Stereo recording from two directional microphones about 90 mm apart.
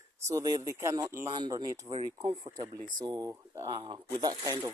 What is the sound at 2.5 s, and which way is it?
Speech, 50° right (ahead or behind).